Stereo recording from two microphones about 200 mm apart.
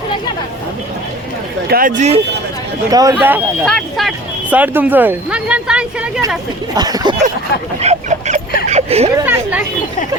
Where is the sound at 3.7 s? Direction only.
Centre (ahead or behind).